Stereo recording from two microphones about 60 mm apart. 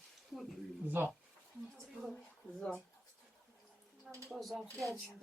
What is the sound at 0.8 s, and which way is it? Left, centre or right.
Speech, right.